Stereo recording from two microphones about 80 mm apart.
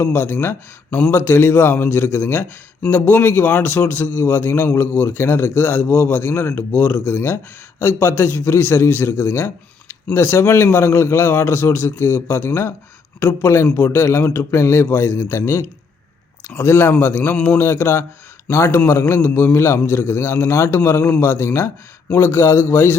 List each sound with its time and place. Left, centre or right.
0.0 s a man's voice: left
17.3 s speech: centre
17.6 s a man's voice: left